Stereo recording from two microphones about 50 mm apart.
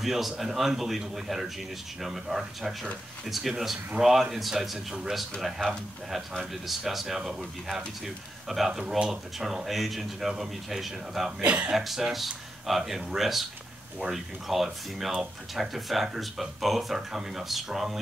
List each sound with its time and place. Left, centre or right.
0.0 s speech: centre
11.4 s speech: right
11.7 s speech: centre